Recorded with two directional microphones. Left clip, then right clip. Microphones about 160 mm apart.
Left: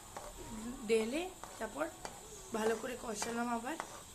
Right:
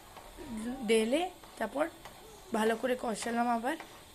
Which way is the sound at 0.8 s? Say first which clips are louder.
Right 5 dB; 30° right (ahead or behind).